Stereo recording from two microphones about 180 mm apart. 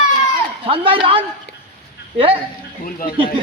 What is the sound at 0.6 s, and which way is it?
Speech, 30° right (ahead or behind).